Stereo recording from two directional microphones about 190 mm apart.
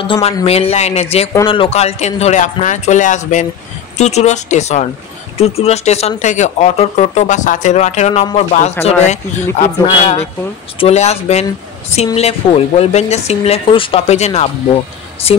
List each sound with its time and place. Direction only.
0.0 s speech: 25° left (ahead or behind)